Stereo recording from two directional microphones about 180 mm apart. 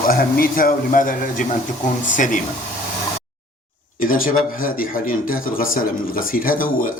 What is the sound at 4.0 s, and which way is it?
Speech, 50° left (ahead or behind).